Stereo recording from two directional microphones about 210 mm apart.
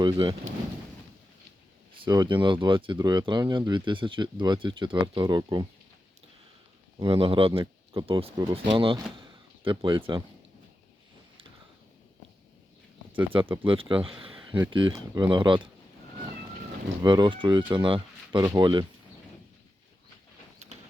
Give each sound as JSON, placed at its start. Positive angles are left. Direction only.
{"t": 0.0, "sound": "speech", "side_deg": -20}
{"t": 2.0, "sound": "speech", "side_deg": -20}
{"t": 7.0, "sound": "speech", "side_deg": -25}
{"t": 9.1, "sound": "door", "side_deg": -25}
{"t": 13.7, "sound": "speech", "side_deg": -25}
{"t": 17.0, "sound": "speech", "side_deg": -20}